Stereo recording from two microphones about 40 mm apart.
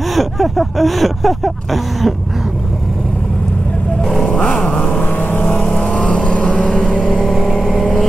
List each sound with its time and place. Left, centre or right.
0.1 s speech: centre
4.2 s vehicle: left
5.0 s vehicle: left
5.8 s vehicle: centre
7.5 s vehicle: centre